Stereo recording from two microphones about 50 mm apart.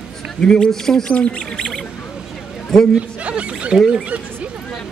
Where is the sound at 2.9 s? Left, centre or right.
Right.